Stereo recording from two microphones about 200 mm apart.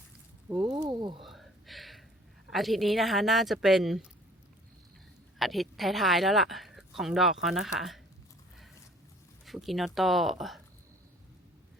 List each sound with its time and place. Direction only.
0.4 s speech: 5° right (ahead or behind)
0.7 s a sound: 20° right (ahead or behind)
1.2 s a sound: centre (ahead or behind)
2.5 s speech: centre (ahead or behind)
5.4 s speech: centre (ahead or behind)
9.5 s speech: centre (ahead or behind)